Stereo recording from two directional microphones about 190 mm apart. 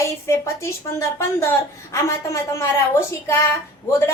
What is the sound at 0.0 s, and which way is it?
A woman's voice, 15° left (ahead or behind).